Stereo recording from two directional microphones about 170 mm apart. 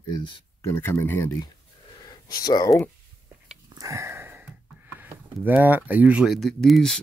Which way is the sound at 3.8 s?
20° right (ahead or behind).